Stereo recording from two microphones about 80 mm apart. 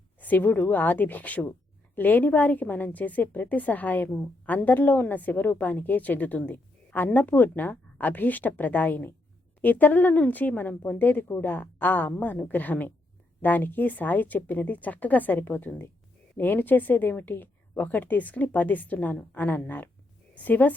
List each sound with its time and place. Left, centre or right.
0.2 s a woman's voice: left